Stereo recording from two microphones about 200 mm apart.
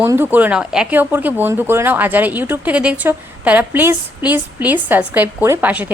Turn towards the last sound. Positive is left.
turn(degrees=-10)  # may be behind; listen again after turning